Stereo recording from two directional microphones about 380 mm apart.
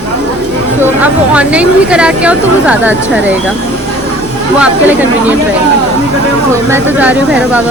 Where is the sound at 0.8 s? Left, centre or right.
Centre.